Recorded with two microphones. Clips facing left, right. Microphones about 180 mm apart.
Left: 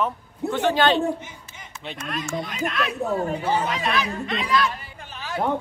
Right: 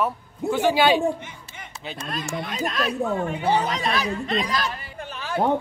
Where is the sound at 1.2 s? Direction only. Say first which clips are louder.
Right 1 dB; 60° right (ahead or behind).